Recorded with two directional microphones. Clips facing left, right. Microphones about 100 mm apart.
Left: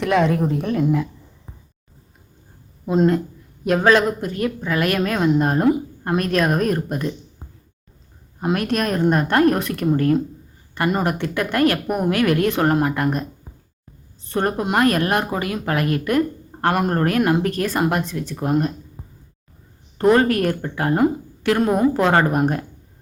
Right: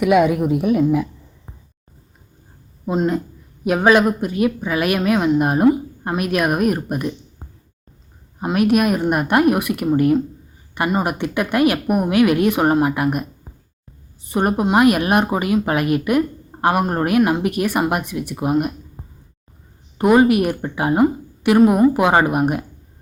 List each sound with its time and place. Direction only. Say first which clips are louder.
0.0 s speech: right 3 dB; 10° right (ahead or behind)
3.6 s speech: right 2 dB; 15° right (ahead or behind)
5.6 s speech: right 3 dB; 5° right (ahead or behind)
6.1 s speech: even; 15° right (ahead or behind)
8.5 s speech: right 6 dB; 10° right (ahead or behind)
20.0 s speech: right 2 dB; 15° right (ahead or behind)